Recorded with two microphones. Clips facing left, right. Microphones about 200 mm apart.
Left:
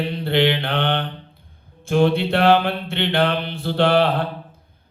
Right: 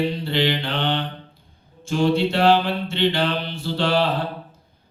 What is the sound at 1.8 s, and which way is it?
Speech, 55° left (ahead or behind).